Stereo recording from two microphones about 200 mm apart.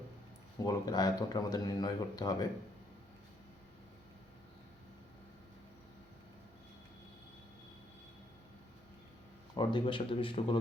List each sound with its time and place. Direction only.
0.6 s speech: 20° left (ahead or behind)
9.6 s speech: 25° left (ahead or behind)